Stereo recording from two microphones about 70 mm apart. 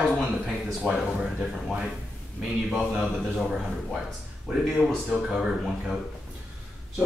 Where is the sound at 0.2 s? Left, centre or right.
Centre.